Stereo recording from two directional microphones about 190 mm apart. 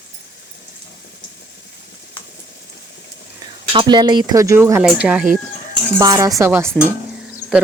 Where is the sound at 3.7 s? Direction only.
25° right (ahead or behind).